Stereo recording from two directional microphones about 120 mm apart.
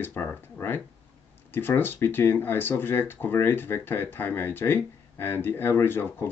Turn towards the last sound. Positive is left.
turn(degrees=20)  # may be behind; listen again after turning